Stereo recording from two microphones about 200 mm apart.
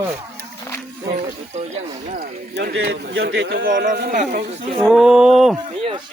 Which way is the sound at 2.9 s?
70° right (ahead or behind).